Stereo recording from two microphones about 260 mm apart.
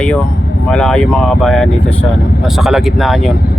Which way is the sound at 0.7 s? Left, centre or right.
Centre.